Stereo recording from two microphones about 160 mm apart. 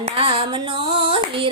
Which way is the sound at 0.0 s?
35° right (ahead or behind).